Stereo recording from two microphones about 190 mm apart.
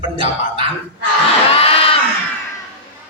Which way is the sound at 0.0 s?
30° right (ahead or behind).